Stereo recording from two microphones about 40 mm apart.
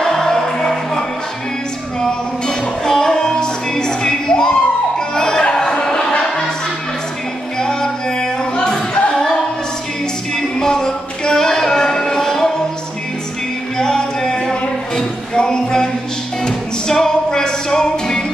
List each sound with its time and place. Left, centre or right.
0.0 s music: centre
7.5 s music: centre
10.3 s a sound: centre
13.7 s music: centre